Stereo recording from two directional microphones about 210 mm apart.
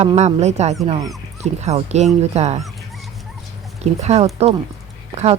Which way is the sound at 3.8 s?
30° right (ahead or behind).